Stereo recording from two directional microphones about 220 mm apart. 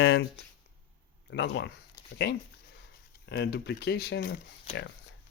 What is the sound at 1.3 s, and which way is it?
Speech, 50° left (ahead or behind).